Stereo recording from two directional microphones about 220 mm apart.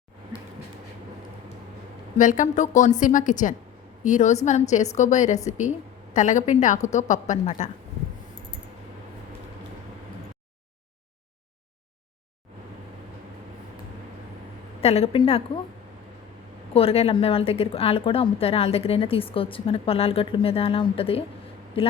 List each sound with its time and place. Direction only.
2.1 s a woman's voice: 35° left (ahead or behind)
14.8 s a woman's voice: 25° left (ahead or behind)
16.7 s a woman's voice: 25° left (ahead or behind)